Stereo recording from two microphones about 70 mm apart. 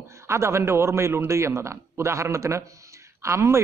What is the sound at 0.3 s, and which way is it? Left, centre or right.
A man's voice, right.